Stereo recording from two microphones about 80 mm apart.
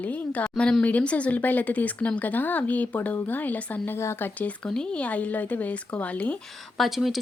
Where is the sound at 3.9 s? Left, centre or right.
Left.